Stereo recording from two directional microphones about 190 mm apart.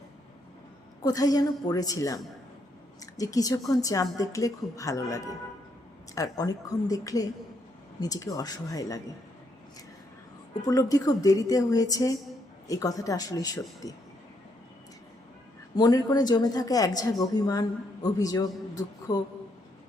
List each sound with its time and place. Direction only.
1.0 s a woman's voice: 20° left (ahead or behind)
10.7 s a woman's voice: 20° left (ahead or behind)
15.7 s a woman's voice: 20° left (ahead or behind)